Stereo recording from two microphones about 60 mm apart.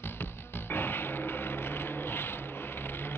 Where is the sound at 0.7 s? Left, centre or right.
Left.